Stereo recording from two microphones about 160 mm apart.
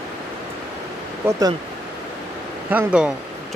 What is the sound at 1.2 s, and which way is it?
Speech, 20° right (ahead or behind).